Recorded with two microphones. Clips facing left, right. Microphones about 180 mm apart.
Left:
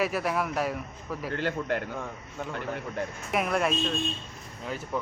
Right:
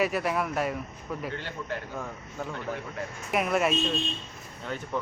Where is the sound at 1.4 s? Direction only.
60° left (ahead or behind).